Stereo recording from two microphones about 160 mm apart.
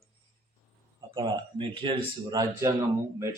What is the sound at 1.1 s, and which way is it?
Speech, 30° right (ahead or behind).